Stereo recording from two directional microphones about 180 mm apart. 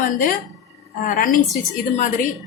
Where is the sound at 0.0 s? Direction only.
50° left (ahead or behind).